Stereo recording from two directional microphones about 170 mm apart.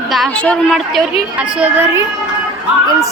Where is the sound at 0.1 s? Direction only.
5° left (ahead or behind).